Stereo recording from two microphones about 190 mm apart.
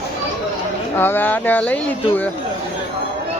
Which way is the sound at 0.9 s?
10° left (ahead or behind).